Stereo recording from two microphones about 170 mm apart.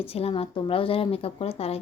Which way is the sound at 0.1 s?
35° left (ahead or behind).